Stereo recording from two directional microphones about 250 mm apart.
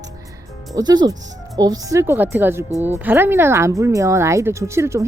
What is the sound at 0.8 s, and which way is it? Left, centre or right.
Speech, centre.